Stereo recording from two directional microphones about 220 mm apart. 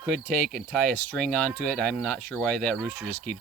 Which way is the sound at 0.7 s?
5° left (ahead or behind).